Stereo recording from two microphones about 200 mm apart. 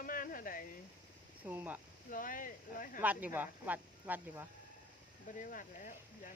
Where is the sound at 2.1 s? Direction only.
45° left (ahead or behind).